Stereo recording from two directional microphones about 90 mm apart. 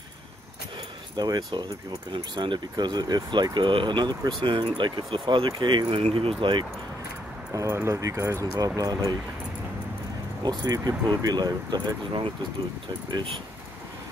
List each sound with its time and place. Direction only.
1.1 s speech: 50° right (ahead or behind)
4.4 s speech: 65° right (ahead or behind)
7.5 s speech: 35° right (ahead or behind)
10.6 s speech: 45° right (ahead or behind)